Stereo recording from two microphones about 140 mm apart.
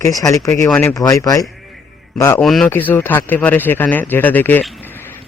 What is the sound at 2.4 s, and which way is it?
Speech, centre (ahead or behind).